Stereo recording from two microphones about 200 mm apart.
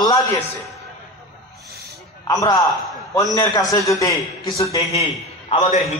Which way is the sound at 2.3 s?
15° left (ahead or behind).